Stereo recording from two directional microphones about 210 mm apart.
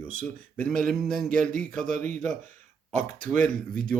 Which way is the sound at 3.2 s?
35° right (ahead or behind).